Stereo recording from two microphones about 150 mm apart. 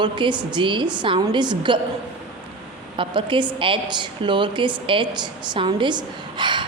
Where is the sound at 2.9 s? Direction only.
35° right (ahead or behind).